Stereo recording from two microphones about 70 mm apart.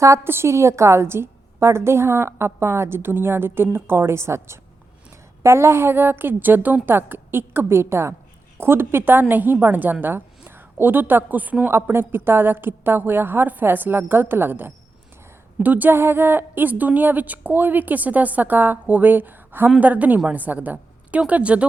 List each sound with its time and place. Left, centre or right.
0.3 s a woman's voice: right
11.7 s a woman's voice: right; by 21.7 s centre